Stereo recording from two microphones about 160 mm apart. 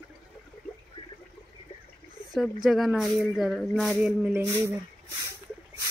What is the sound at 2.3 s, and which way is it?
Speech, centre (ahead or behind).